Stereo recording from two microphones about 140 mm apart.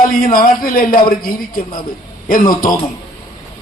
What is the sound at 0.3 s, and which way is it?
Speech, 90° left.